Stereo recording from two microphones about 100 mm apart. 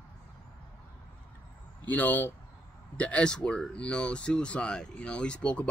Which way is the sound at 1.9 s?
15° left (ahead or behind).